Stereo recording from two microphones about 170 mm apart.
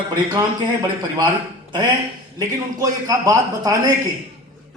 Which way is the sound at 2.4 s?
20° right (ahead or behind).